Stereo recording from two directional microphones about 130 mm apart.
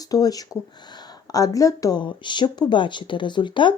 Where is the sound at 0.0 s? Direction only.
30° left (ahead or behind).